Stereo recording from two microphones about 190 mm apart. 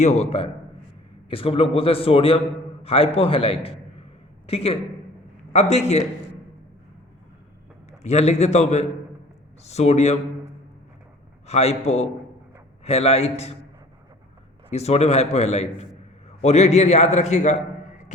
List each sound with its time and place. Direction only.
0.0 s a man's voice: 35° left (ahead or behind)
7.9 s a man's voice: 35° left (ahead or behind)
11.4 s a man's voice: 35° left (ahead or behind)
14.7 s a man's voice: 35° left (ahead or behind)